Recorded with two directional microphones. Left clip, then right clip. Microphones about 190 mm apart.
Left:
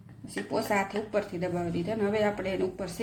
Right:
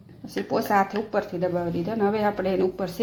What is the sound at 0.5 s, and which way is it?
Speech, 20° right (ahead or behind).